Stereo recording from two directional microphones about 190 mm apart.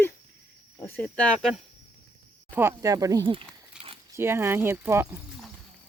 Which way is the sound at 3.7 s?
5° right (ahead or behind).